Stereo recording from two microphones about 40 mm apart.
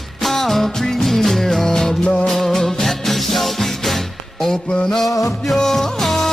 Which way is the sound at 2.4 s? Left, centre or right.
Centre.